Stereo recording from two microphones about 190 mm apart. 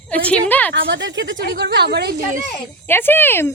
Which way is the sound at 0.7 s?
70° right (ahead or behind).